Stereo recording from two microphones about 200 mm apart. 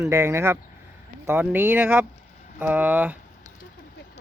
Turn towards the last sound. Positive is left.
turn(degrees=-10)  # may be behind; listen again after turning